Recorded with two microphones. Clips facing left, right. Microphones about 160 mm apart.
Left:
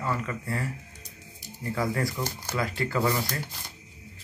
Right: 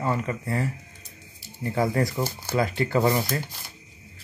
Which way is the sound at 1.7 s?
25° right (ahead or behind).